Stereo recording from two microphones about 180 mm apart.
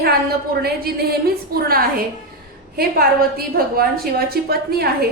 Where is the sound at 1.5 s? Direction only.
55° right (ahead or behind).